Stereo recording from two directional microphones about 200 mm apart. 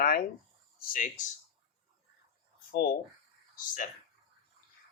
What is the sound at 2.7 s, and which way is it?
Speech, 45° left (ahead or behind).